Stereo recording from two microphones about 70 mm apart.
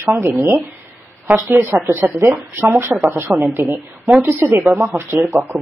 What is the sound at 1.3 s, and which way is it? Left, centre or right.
A woman's voice, right.